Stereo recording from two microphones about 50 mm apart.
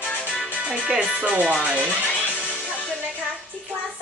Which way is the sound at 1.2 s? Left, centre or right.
Right.